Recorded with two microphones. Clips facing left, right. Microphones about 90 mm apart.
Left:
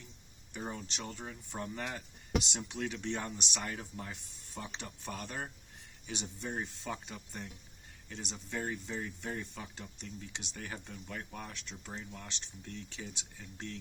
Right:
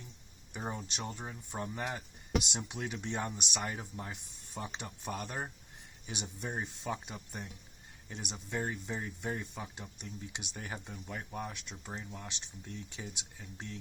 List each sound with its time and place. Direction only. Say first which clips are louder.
0.5 s speech: right 1 dB; 15° right (ahead or behind)
11.5 s speech: right 1 dB; 5° right (ahead or behind)